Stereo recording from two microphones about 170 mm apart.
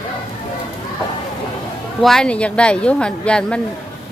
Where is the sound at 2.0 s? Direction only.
5° left (ahead or behind).